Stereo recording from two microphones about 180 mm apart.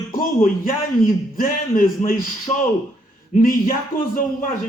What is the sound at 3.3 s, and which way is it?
Speech, 50° left (ahead or behind).